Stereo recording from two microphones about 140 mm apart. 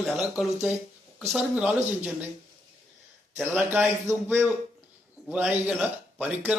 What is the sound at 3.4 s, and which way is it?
A man's voice, 15° right (ahead or behind).